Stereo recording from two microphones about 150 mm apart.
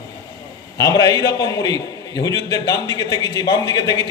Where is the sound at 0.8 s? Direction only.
25° left (ahead or behind).